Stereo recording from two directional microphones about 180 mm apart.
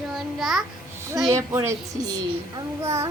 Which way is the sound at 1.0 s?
15° right (ahead or behind).